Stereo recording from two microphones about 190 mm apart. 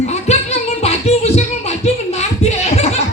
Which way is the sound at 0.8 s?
35° left (ahead or behind).